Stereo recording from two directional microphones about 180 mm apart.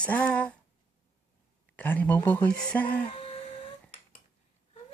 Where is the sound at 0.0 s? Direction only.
10° left (ahead or behind).